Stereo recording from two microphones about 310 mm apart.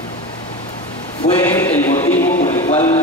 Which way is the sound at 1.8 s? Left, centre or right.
Centre.